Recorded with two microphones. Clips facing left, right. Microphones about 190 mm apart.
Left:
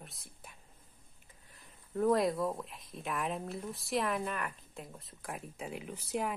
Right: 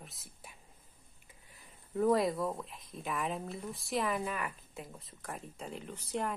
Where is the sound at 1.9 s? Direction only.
Centre (ahead or behind).